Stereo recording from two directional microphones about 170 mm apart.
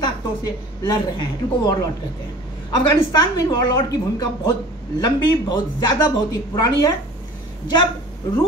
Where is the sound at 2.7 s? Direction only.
25° left (ahead or behind).